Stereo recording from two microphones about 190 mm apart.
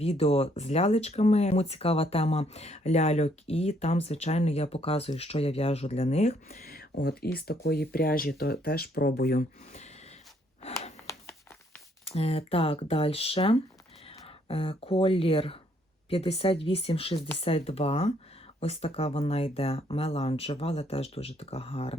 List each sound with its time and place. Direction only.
0.0 s speech: 30° left (ahead or behind)
6.5 s speech: 50° left (ahead or behind)
11.1 s a sound: 15° left (ahead or behind)
12.0 s speech: 30° left (ahead or behind)